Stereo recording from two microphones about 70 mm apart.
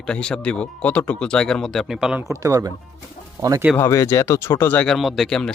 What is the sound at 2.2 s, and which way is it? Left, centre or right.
Speech, right.